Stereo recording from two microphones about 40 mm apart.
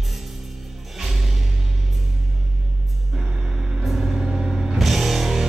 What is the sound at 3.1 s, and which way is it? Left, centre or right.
Vehicle, centre.